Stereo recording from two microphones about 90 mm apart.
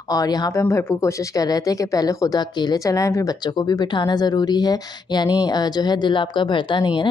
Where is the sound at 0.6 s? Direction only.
30° left (ahead or behind).